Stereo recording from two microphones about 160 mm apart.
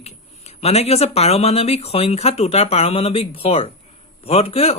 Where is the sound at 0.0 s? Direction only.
40° left (ahead or behind).